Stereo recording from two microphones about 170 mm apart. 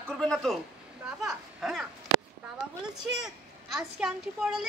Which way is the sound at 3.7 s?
5° right (ahead or behind).